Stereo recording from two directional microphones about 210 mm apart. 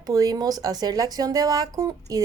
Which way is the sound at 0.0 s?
15° right (ahead or behind).